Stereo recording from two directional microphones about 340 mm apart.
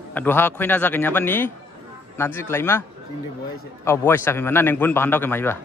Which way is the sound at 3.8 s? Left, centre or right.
Centre.